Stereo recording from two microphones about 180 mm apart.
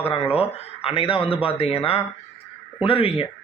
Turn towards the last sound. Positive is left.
turn(degrees=30)  # may be behind; listen again after turning